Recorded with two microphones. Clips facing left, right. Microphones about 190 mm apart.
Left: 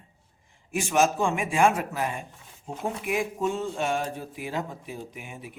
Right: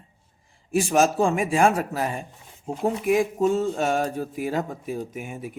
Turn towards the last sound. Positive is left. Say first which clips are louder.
# right 7 dB
turn(degrees=-45)  # may be behind; listen again after turning